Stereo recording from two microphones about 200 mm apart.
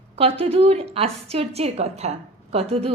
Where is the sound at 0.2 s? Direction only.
30° right (ahead or behind).